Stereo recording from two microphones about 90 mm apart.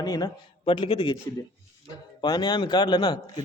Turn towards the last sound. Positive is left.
turn(degrees=50)  # may be behind; listen again after turning